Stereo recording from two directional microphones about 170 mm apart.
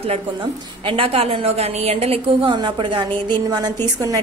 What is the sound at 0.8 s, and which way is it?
A woman's voice, 30° right (ahead or behind).